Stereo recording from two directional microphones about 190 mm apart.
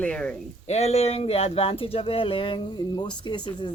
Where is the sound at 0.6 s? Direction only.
35° left (ahead or behind).